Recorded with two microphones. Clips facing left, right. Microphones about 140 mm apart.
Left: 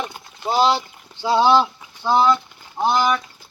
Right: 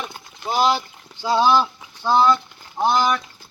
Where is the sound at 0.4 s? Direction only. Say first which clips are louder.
Left 2 dB; 35° left (ahead or behind).